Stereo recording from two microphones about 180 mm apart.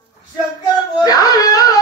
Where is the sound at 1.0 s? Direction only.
20° left (ahead or behind).